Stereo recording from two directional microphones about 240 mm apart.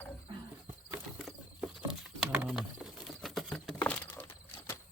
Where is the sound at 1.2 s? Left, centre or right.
Centre.